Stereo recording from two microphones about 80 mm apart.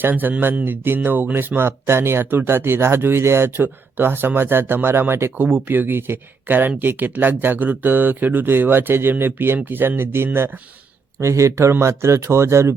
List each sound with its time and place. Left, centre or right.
0.0 s speech: right